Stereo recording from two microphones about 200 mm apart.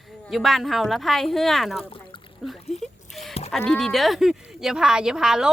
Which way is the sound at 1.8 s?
25° left (ahead or behind).